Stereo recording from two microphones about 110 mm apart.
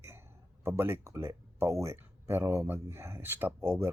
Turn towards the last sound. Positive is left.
turn(degrees=-20)  # may be behind; listen again after turning